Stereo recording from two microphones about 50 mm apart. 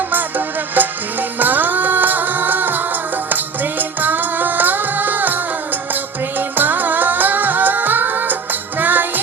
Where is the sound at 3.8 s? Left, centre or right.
Right.